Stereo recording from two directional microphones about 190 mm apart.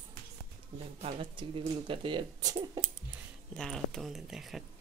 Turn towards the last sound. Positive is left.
turn(degrees=0)  # may be behind; listen again after turning